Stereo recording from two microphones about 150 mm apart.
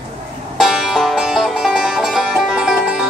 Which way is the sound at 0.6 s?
Centre (ahead or behind).